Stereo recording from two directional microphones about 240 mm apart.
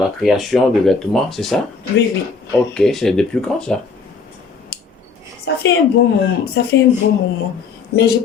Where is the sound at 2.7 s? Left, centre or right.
Centre.